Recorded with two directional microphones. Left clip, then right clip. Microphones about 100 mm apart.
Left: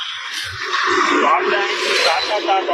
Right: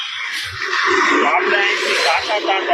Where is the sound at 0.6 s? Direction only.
35° left (ahead or behind).